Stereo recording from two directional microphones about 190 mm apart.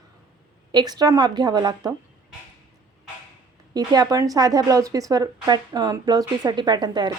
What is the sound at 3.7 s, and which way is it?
A woman's voice, 20° right (ahead or behind).